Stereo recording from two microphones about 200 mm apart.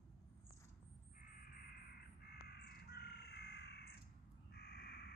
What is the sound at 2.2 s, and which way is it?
Crow, 50° left (ahead or behind).